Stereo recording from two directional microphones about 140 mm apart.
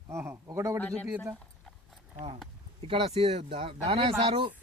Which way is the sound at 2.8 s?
45° right (ahead or behind).